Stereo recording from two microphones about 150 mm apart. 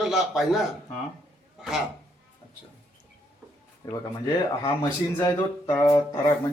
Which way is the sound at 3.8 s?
20° left (ahead or behind).